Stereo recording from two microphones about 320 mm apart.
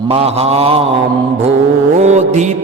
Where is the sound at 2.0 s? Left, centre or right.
Right.